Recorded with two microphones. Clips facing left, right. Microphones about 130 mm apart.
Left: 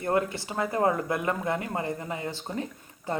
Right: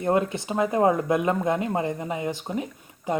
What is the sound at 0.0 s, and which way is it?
Speech, 20° right (ahead or behind).